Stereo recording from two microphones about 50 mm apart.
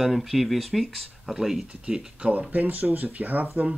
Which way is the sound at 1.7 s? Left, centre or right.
Centre.